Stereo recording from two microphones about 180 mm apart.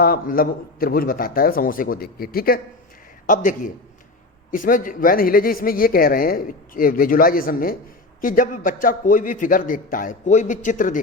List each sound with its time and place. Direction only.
0.0 s speech: 55° left (ahead or behind)